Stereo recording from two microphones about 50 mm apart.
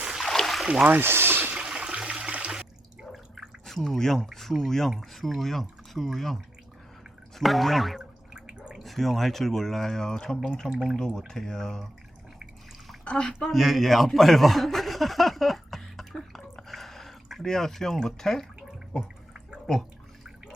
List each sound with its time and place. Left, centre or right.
0.2 s boat: centre
0.9 s speech: right
1.1 s a sound: right
1.5 s toilet flush: centre
2.5 s water: centre
3.7 s speech: centre
8.3 s drip: centre
8.8 s speech: centre
13.1 s speech: centre
13.5 s speech: centre